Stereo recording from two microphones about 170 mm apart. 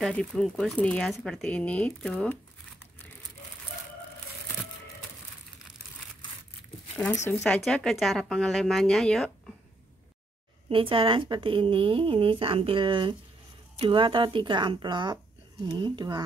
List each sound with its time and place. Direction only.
0.0 s speech: 5° left (ahead or behind)
7.4 s speech: 5° left (ahead or behind)
10.7 s speech: 30° right (ahead or behind)